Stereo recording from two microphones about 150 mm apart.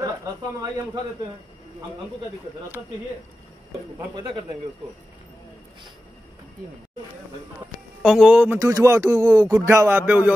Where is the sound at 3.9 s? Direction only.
30° right (ahead or behind).